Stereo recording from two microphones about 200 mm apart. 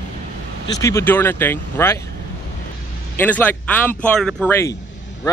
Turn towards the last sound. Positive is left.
turn(degrees=10)  # may be behind; listen again after turning